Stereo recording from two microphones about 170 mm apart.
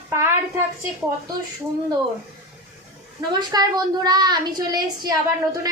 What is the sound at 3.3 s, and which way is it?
A woman's voice, 25° right (ahead or behind).